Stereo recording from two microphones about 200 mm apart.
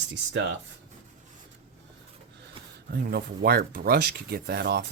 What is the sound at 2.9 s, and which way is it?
Speech, 50° right (ahead or behind).